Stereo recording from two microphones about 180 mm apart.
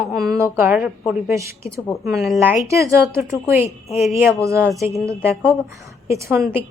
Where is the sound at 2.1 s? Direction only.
Centre (ahead or behind).